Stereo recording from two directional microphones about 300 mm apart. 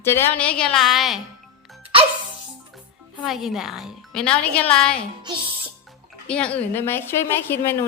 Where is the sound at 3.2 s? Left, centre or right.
Centre.